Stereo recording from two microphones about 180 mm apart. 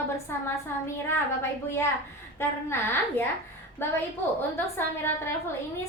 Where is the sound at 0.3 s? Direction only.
15° left (ahead or behind).